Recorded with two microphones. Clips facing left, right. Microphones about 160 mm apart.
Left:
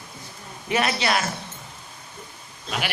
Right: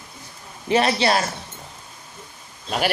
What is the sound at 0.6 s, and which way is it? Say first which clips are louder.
Speech: right 5 dB; 30° right (ahead or behind).